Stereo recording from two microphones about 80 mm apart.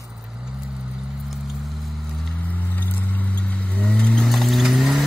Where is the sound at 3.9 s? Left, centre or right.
Centre.